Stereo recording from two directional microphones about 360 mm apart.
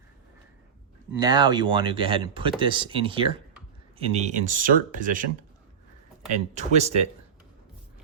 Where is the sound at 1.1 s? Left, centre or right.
Centre.